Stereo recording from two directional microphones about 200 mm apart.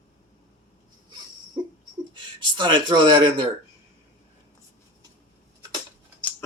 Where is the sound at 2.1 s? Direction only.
25° right (ahead or behind).